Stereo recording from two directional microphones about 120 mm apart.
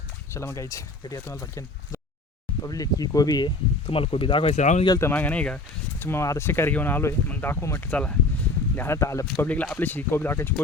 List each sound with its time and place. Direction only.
0.3 s speech: 25° left (ahead or behind); by 4.5 s 50° left (ahead or behind)
4.5 s speech: 85° left
4.9 s speech: 15° left (ahead or behind)
9.4 s speech: 15° left (ahead or behind)